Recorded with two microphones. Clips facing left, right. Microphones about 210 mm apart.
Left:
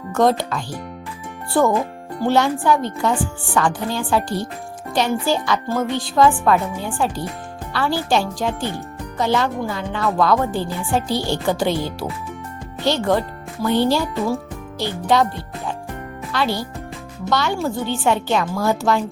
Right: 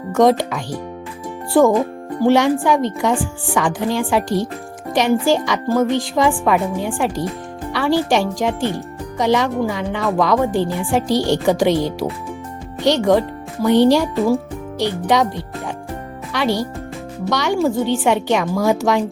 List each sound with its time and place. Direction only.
0.2 s speech: 90° right
2.2 s speech: 90° right
13.7 s a woman's voice: 80° right